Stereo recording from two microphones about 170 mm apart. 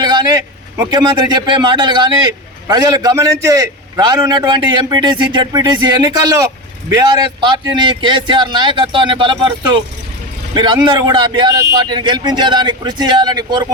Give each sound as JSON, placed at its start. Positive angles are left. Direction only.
{"t": 0.0, "sound": "a man's voice", "side_deg": -25}
{"t": 7.8, "sound": "a man's voice", "side_deg": -30}